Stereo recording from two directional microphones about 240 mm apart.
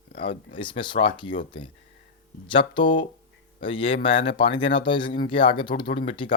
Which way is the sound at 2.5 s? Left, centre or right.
Centre.